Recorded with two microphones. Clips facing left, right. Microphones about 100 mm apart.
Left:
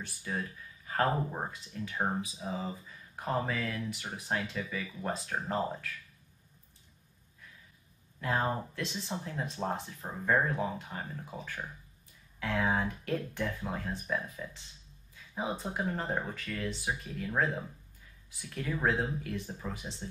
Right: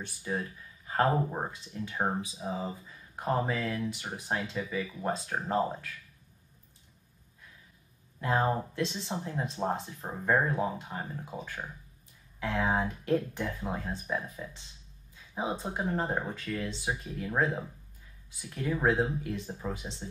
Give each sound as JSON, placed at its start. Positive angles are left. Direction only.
{"t": 0.0, "sound": "speech", "side_deg": -20}
{"t": 8.5, "sound": "speech", "side_deg": -20}